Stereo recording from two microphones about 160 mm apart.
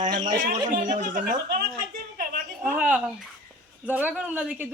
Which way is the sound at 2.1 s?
60° right (ahead or behind).